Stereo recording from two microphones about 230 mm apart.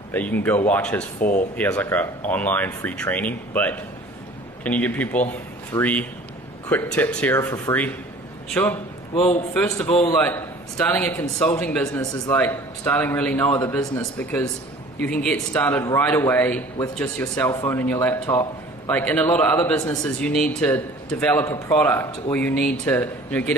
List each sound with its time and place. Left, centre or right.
0.1 s a man's voice: centre